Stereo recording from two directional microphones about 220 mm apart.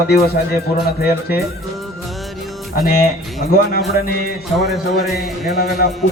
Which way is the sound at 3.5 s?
45° left (ahead or behind).